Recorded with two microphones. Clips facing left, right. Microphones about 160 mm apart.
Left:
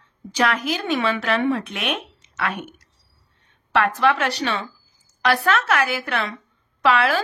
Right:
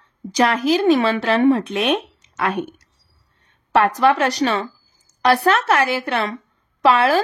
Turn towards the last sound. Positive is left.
turn(degrees=-35)  # may be behind; listen again after turning